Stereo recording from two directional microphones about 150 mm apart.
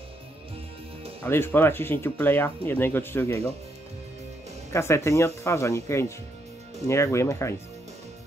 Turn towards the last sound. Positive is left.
turn(degrees=-50)  # may be behind; listen again after turning